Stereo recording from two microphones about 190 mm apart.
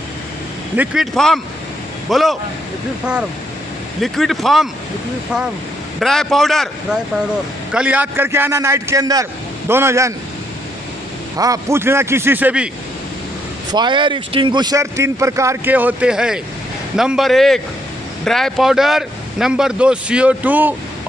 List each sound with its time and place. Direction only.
0.7 s speech: centre (ahead or behind)
4.0 s speech: centre (ahead or behind)
5.9 s speech: centre (ahead or behind); by 10.1 s 15° right (ahead or behind)
11.3 s speech: 20° right (ahead or behind)
13.7 s speech: 25° right (ahead or behind)